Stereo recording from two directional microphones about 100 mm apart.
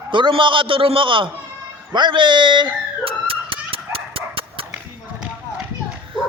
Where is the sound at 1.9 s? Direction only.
50° right (ahead or behind).